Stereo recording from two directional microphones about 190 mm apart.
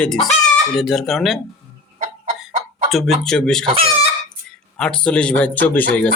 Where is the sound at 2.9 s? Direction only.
Centre (ahead or behind).